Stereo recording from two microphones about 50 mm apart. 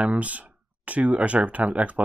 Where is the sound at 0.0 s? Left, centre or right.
Right.